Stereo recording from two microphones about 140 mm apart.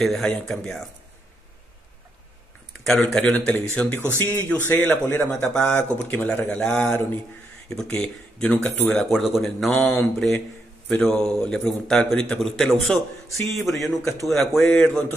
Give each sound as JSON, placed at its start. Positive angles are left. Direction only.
{"t": 0.0, "sound": "a man's voice", "side_deg": 5}
{"t": 2.8, "sound": "a man's voice", "side_deg": 0}